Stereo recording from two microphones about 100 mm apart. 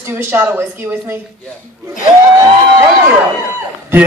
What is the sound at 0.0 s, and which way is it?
A man's voice, 25° right (ahead or behind).